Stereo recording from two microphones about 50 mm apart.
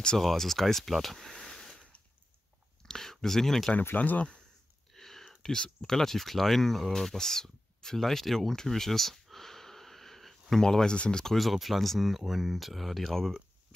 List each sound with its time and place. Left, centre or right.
0.2 s speech: centre
2.8 s a sound: centre
3.9 s speech: left
4.9 s speech: centre
11.3 s speech: centre